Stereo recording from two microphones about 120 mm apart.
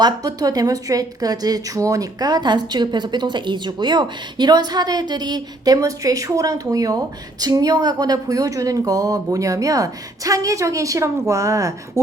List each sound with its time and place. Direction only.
0.0 s a woman's voice: 30° right (ahead or behind)